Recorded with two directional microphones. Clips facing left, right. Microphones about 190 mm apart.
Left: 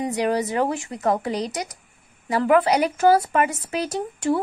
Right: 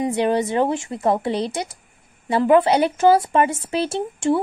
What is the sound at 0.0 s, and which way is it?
A woman's voice, 25° right (ahead or behind).